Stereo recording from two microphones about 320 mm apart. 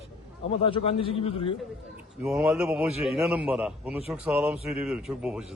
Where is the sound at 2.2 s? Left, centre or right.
Centre.